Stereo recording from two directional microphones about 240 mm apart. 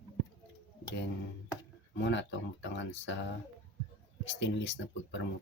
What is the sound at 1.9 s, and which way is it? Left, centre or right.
Speech, left.